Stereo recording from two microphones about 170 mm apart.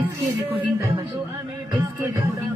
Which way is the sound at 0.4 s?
10° right (ahead or behind).